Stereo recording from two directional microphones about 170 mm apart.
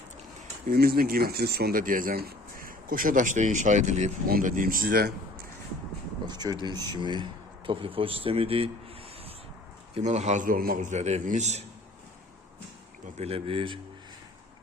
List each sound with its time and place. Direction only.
0.7 s speech: 65° right (ahead or behind); by 4.1 s 45° right (ahead or behind)
4.3 s speech: 55° right (ahead or behind)
6.2 s speech: 25° right (ahead or behind)
9.9 s a man's voice: 45° right (ahead or behind)
13.1 s speech: 35° right (ahead or behind)